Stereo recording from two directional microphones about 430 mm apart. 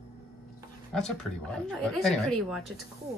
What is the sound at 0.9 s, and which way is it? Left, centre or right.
A woman's voice, centre.